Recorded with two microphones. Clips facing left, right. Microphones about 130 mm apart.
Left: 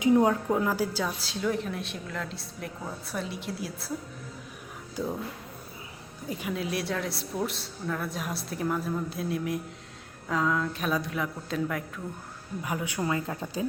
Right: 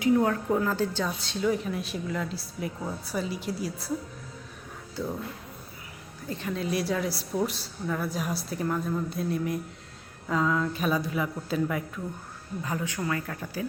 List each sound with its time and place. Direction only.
0.0 s a woman's voice: 20° left (ahead or behind); by 3.9 s centre (ahead or behind)
6.2 s a woman's voice: 10° left (ahead or behind)
12.6 s speech: 15° left (ahead or behind)